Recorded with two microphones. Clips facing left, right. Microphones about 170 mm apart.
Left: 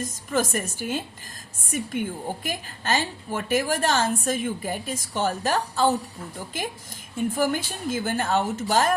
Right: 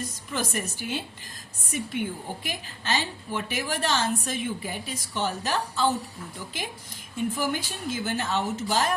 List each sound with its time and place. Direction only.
0.0 s a woman's voice: 45° left (ahead or behind)